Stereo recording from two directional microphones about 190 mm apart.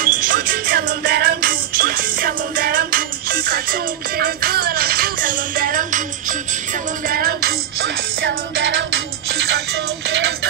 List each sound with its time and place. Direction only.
0.0 s music: 45° right (ahead or behind); by 10.3 s 70° right (ahead or behind)